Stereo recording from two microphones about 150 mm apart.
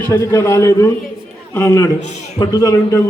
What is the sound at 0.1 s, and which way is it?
A man's voice, 20° left (ahead or behind).